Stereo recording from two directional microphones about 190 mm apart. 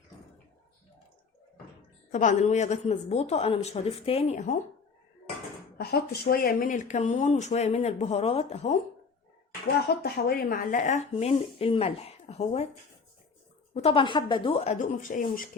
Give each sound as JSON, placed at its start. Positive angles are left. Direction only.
{"t": 2.1, "sound": "speech", "side_deg": 40}
{"t": 5.7, "sound": "speech", "side_deg": 55}
{"t": 10.0, "sound": "speech", "side_deg": 50}
{"t": 11.1, "sound": "speech", "side_deg": 30}
{"t": 13.7, "sound": "speech", "side_deg": 30}